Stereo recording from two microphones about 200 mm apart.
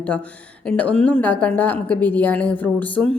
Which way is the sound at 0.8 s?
5° left (ahead or behind).